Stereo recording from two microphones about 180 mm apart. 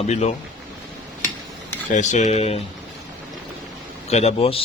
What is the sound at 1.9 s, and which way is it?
Speech, 40° left (ahead or behind).